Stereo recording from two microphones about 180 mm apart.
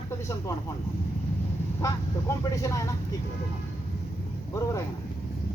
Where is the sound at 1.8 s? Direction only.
15° left (ahead or behind).